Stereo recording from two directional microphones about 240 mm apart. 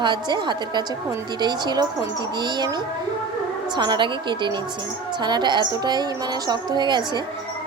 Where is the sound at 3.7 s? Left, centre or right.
Centre.